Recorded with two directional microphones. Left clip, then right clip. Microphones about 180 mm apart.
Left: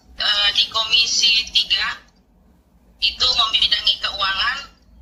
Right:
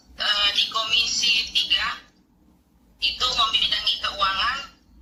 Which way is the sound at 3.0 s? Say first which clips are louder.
Left 4 dB; 10° right (ahead or behind).